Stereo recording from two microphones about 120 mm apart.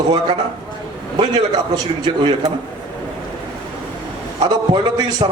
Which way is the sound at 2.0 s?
40° right (ahead or behind).